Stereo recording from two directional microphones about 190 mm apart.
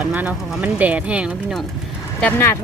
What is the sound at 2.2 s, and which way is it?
Speech, 10° left (ahead or behind).